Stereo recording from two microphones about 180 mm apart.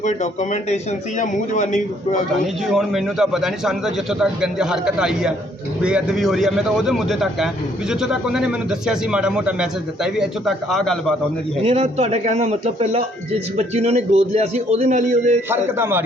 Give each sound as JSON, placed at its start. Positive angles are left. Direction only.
{"t": 0.0, "sound": "a man's voice", "side_deg": 40}
{"t": 2.6, "sound": "speech", "side_deg": 0}
{"t": 11.6, "sound": "a man's voice", "side_deg": -35}
{"t": 15.4, "sound": "speech", "side_deg": -10}